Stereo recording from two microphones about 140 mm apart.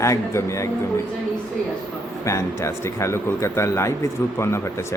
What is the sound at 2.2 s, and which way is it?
Speech, 20° left (ahead or behind).